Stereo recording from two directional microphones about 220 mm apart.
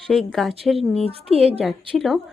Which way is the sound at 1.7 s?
Centre (ahead or behind).